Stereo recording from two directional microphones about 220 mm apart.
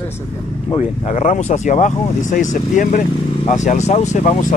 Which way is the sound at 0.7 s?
30° left (ahead or behind).